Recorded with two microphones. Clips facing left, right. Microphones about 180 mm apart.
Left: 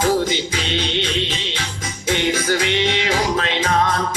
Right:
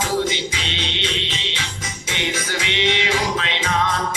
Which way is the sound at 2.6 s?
45° left (ahead or behind).